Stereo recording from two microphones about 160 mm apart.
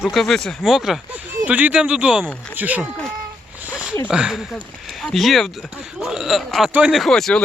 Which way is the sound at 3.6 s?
5° right (ahead or behind).